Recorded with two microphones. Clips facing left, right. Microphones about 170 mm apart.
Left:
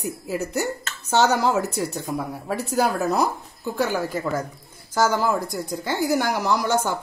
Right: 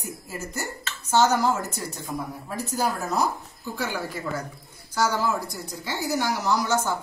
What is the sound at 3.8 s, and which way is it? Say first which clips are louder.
A woman's voice: left 7 dB; 45° left (ahead or behind).